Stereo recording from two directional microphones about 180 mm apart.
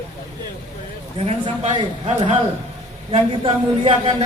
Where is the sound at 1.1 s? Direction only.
35° right (ahead or behind).